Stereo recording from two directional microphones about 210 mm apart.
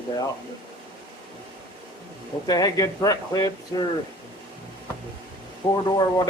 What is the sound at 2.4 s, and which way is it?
A man's voice, 15° left (ahead or behind).